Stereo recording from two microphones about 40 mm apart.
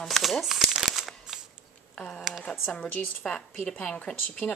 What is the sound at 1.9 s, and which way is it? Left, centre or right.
A woman's voice, centre.